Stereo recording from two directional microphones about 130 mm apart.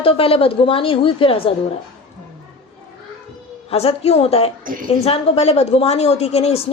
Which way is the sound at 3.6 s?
50° left (ahead or behind).